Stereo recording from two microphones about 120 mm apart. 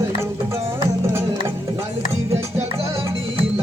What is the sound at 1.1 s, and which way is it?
Music, 20° right (ahead or behind).